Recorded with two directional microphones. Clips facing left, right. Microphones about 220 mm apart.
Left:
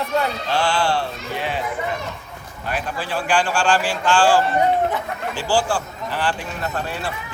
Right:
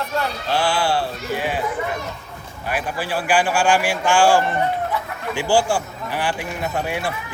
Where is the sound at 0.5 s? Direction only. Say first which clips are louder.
Right 1 dB; 10° right (ahead or behind).